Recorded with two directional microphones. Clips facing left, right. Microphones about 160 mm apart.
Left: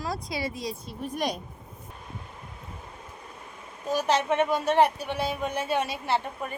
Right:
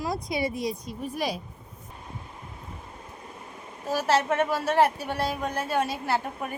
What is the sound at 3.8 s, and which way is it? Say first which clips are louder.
A woman's voice: right 1 dB; 5° right (ahead or behind).